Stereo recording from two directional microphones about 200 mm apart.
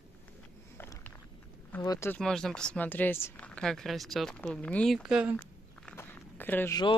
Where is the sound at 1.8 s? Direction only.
15° left (ahead or behind).